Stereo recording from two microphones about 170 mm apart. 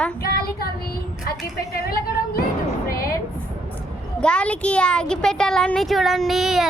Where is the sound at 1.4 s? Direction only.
65° left (ahead or behind).